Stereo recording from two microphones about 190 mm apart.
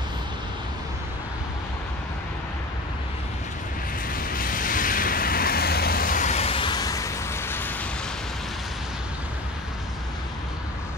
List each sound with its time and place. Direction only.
4.1 s vehicle: 50° left (ahead or behind); by 7.7 s 10° left (ahead or behind)